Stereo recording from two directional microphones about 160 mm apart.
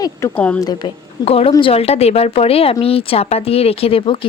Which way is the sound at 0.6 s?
25° left (ahead or behind).